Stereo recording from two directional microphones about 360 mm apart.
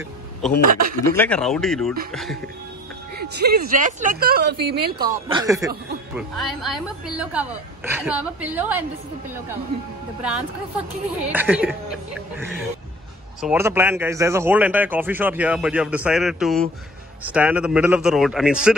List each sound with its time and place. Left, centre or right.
0.7 s speech: right
1.1 s speech: centre
3.2 s speech: right
4.9 s speech: centre
11.3 s speech: centre